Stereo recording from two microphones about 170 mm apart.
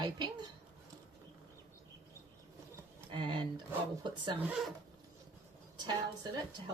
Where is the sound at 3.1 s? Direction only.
30° right (ahead or behind).